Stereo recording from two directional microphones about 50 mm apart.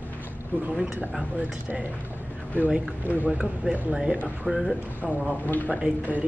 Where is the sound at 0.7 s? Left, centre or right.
Centre.